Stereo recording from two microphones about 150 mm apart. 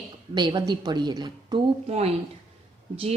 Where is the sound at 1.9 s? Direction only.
45° right (ahead or behind).